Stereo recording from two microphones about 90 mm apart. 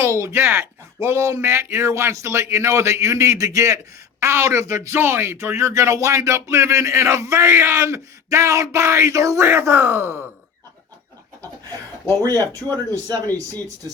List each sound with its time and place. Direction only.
0.0 s speech: 35° right (ahead or behind)
12.2 s speech: 45° right (ahead or behind)